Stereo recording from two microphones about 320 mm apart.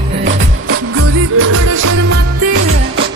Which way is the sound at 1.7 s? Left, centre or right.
Right.